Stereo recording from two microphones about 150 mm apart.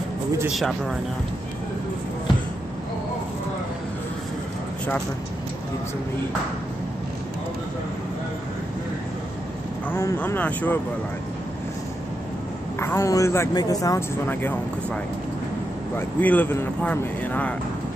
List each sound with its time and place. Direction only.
0.6 s speech: centre (ahead or behind)
9.8 s a man's voice: 15° left (ahead or behind)
12.7 s a man's voice: 15° left (ahead or behind)
16.2 s a man's voice: 10° left (ahead or behind)